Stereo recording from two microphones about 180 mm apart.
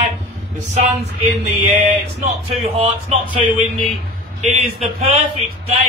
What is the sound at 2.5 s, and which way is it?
Speech, 35° right (ahead or behind).